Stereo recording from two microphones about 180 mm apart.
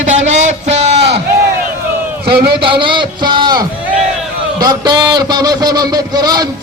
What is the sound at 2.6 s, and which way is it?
A man's voice, 25° right (ahead or behind).